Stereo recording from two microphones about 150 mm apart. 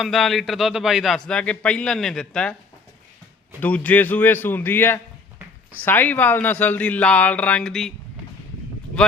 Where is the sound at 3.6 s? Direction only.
10° left (ahead or behind).